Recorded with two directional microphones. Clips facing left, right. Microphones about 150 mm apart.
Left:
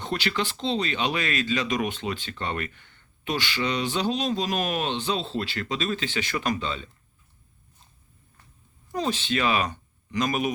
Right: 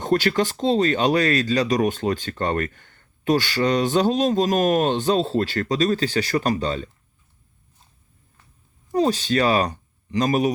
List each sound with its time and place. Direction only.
0.0 s speech: 45° right (ahead or behind)
8.9 s speech: 40° right (ahead or behind)